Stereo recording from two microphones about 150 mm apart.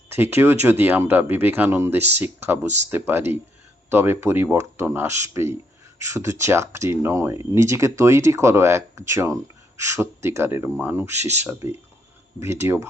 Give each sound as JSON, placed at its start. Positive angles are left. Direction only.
{"t": 0.1, "sound": "speech", "side_deg": -15}